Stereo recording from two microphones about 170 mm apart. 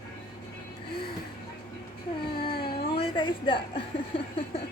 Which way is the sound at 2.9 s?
30° left (ahead or behind).